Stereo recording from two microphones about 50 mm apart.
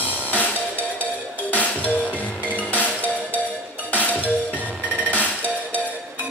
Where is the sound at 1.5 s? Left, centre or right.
Left.